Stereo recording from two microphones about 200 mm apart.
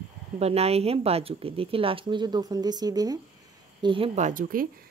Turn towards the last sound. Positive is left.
turn(degrees=-45)  # may be behind; listen again after turning